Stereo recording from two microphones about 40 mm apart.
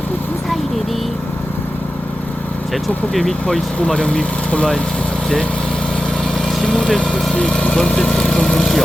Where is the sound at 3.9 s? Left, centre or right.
Left.